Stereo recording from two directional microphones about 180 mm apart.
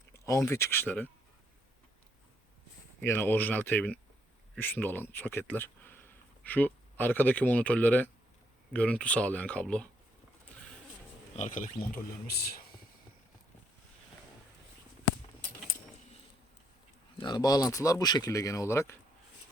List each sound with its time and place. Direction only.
0.1 s speech: 15° left (ahead or behind)
3.0 s speech: 10° left (ahead or behind)
11.3 s speech: 45° left (ahead or behind)
12.4 s speech: 60° left (ahead or behind)
17.2 s speech: 25° left (ahead or behind)